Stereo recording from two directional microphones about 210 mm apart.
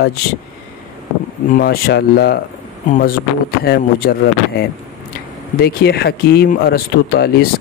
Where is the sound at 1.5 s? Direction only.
45° left (ahead or behind).